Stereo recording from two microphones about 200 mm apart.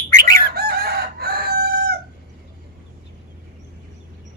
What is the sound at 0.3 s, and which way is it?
Chicken, 50° right (ahead or behind).